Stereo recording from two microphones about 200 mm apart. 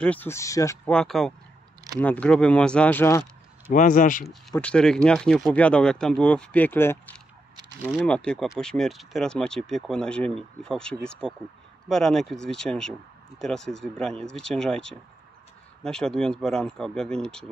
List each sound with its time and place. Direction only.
0.0 s speech: 10° left (ahead or behind)
0.9 s speech: centre (ahead or behind)
3.7 s speech: 40° left (ahead or behind)
4.3 s speech: 5° left (ahead or behind)